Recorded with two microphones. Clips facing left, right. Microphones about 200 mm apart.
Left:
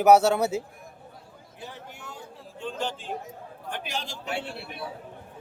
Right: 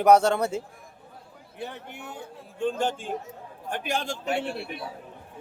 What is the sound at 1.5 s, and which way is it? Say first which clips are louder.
A man's voice: right 5 dB; 60° right (ahead or behind).